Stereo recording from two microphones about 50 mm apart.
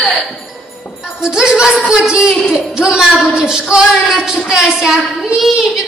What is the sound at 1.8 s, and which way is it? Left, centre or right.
Speech, centre.